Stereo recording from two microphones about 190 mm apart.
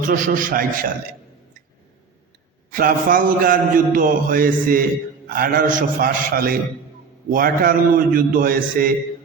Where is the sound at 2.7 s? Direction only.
50° right (ahead or behind).